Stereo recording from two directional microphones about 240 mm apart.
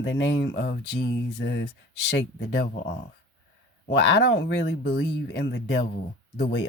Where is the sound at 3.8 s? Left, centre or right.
Left.